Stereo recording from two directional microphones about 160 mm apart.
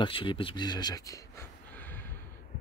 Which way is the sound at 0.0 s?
35° left (ahead or behind).